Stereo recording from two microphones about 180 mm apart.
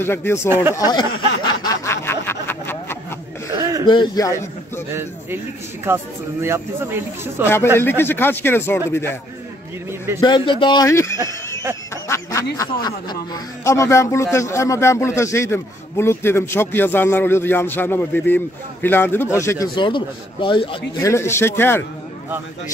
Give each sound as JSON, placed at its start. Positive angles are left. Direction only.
{"t": 0.0, "sound": "a man's voice", "side_deg": 10}
{"t": 1.6, "sound": "a sound", "side_deg": 15}
{"t": 3.8, "sound": "a man's voice", "side_deg": 25}
{"t": 5.9, "sound": "speech", "side_deg": -10}
{"t": 7.4, "sound": "a man's voice", "side_deg": 15}
{"t": 9.8, "sound": "speech", "side_deg": -15}
{"t": 10.2, "sound": "a man's voice", "side_deg": 25}
{"t": 11.9, "sound": "a sound", "side_deg": 15}
{"t": 12.5, "sound": "a man's voice", "side_deg": 20}
{"t": 19.7, "sound": "a man's voice", "side_deg": 25}
{"t": 21.0, "sound": "a man's voice", "side_deg": 15}